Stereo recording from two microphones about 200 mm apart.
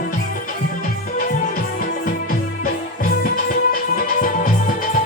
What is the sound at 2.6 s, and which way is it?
Music, 45° left (ahead or behind).